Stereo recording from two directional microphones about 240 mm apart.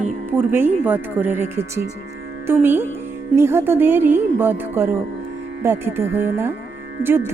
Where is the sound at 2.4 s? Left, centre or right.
Centre.